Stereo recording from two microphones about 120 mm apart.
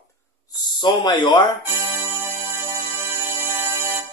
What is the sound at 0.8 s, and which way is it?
Speech, 40° left (ahead or behind).